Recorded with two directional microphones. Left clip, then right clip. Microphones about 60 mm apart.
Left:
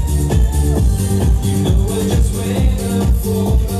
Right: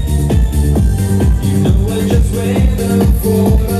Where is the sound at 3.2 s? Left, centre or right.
Right.